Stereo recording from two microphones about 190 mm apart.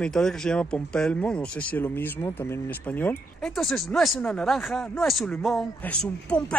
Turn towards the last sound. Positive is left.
turn(degrees=5)  # may be behind; listen again after turning